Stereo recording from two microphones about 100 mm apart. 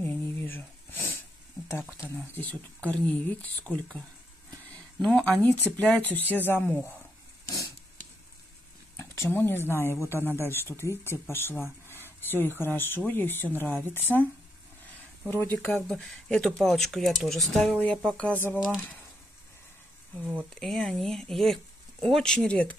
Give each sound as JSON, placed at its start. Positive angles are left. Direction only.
{"t": 0.0, "sound": "wheeze", "side_deg": 20}
{"t": 1.7, "sound": "speech", "side_deg": 25}
{"t": 2.3, "sound": "speech", "side_deg": 15}
{"t": 7.4, "sound": "a sound", "side_deg": 35}
{"t": 8.9, "sound": "a sound", "side_deg": 25}
{"t": 9.8, "sound": "speech", "side_deg": 25}
{"t": 15.2, "sound": "speech", "side_deg": 20}
{"t": 20.5, "sound": "speech", "side_deg": 5}